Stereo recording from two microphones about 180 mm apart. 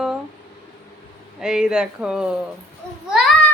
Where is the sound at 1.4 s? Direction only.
5° right (ahead or behind).